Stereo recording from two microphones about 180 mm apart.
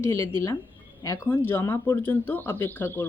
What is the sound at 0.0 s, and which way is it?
Speech, 15° left (ahead or behind).